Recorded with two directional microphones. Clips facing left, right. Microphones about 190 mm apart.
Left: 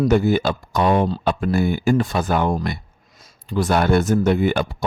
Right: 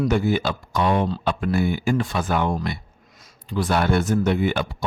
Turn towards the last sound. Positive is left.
turn(degrees=45)  # may be behind; listen again after turning